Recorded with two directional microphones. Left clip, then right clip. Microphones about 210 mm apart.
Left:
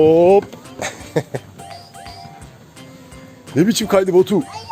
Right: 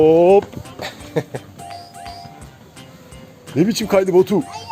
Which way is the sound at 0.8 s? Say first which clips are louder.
Left 2 dB; 30° left (ahead or behind).